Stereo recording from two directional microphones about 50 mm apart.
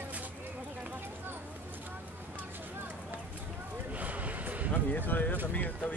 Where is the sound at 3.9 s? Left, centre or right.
Right.